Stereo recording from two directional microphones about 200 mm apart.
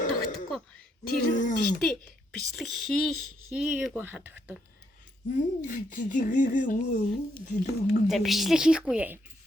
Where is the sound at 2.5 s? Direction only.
Centre (ahead or behind).